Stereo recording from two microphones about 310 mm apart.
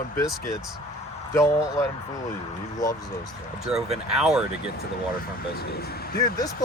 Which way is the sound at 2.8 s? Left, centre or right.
Centre.